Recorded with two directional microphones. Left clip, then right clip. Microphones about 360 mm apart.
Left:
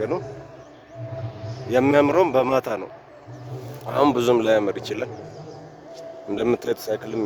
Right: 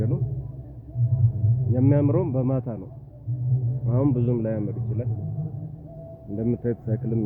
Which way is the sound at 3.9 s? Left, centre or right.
Centre.